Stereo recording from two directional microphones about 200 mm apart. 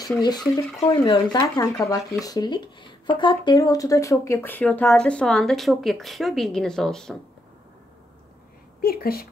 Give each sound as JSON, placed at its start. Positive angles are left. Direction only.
{"t": 0.0, "sound": "speech", "side_deg": 20}
{"t": 8.8, "sound": "a woman's voice", "side_deg": 50}